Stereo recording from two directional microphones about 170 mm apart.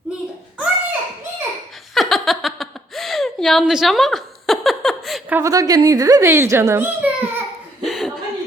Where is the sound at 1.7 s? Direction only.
Centre (ahead or behind).